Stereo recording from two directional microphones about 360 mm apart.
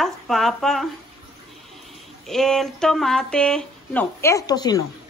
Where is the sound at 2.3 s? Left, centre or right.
Centre.